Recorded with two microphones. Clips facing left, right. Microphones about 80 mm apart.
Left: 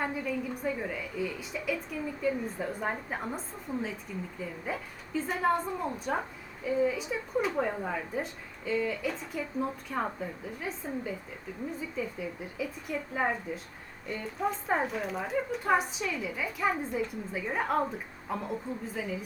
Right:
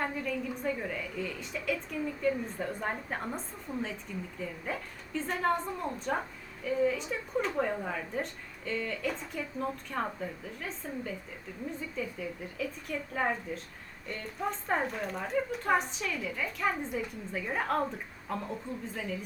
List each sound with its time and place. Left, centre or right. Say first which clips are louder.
0.0 s a woman's voice: left 1 dB; centre